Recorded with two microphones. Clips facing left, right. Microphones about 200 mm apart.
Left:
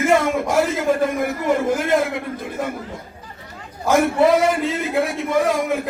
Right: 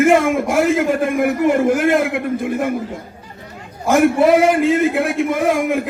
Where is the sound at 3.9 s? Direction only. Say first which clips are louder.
Right 3 dB; 55° right (ahead or behind).